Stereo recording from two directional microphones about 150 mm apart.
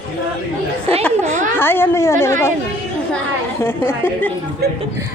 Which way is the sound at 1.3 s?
60° right (ahead or behind).